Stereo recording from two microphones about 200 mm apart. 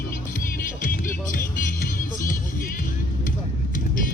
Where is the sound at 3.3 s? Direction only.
45° left (ahead or behind).